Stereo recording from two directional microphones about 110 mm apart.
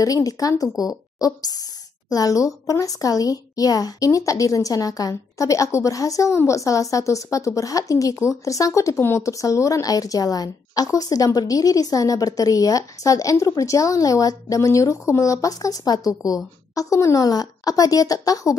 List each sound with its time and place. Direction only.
0.0 s speech: 30° left (ahead or behind)